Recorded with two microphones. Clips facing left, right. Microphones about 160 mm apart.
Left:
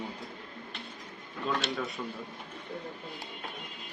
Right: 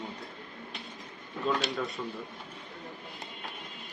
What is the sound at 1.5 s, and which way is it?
Speech, centre (ahead or behind).